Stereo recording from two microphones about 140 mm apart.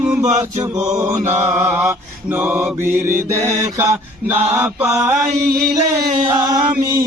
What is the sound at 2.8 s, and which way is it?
Mantra, 65° right (ahead or behind).